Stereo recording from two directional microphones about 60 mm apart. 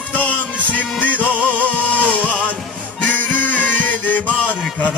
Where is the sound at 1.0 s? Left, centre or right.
Left.